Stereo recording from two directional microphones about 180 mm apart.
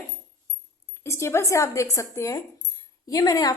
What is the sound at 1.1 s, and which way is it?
A woman's voice, 15° left (ahead or behind).